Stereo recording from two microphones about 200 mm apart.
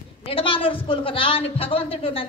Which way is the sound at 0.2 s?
25° left (ahead or behind).